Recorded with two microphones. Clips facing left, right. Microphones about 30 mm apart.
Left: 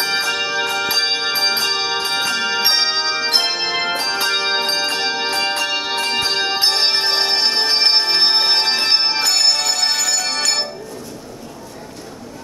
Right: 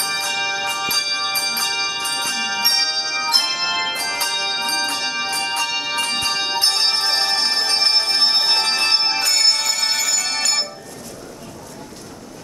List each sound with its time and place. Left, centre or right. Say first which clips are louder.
0.3 s music: left 2 dB; left
1.0 s music: left 4 dB; left
3.3 s music: left 1 dB; centre